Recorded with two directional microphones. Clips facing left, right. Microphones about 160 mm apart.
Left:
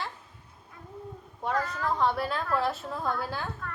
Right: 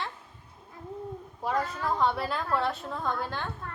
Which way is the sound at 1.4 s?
Centre (ahead or behind).